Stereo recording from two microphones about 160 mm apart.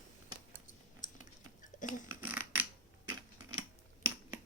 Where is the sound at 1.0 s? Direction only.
55° left (ahead or behind).